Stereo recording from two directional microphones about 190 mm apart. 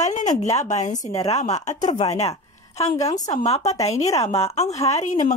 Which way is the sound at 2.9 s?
20° left (ahead or behind).